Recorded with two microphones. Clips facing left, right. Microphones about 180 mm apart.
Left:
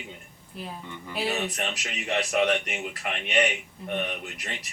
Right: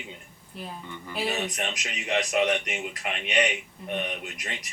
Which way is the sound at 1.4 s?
15° right (ahead or behind).